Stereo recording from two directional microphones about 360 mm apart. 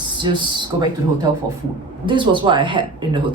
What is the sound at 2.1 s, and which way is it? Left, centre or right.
Speech, centre.